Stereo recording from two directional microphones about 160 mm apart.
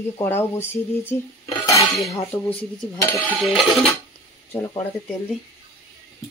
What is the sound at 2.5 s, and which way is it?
Speech, 10° left (ahead or behind).